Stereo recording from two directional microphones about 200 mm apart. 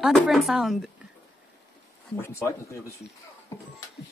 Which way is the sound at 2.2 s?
15° left (ahead or behind).